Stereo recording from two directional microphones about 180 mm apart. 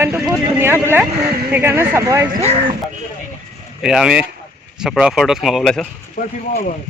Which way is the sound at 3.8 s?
5° right (ahead or behind).